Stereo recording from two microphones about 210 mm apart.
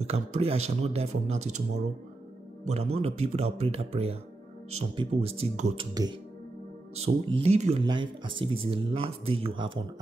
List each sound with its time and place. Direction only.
0.0 s speech: 30° right (ahead or behind)
2.6 s speech: 30° right (ahead or behind)
7.0 s speech: 30° right (ahead or behind)